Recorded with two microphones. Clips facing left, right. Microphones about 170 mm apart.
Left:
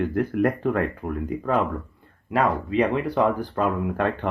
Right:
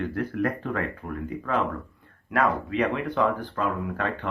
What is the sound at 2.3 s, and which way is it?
Speech, 30° left (ahead or behind).